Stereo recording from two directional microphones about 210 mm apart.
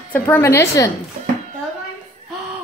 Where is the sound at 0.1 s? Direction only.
10° left (ahead or behind).